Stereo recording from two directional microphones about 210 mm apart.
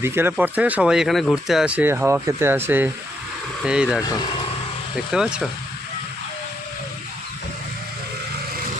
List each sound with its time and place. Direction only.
0.0 s speech: 10° right (ahead or behind)
5.1 s speech: 5° right (ahead or behind)